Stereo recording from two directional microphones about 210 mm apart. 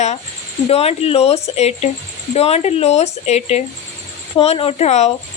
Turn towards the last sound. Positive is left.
turn(degrees=30)  # may be behind; listen again after turning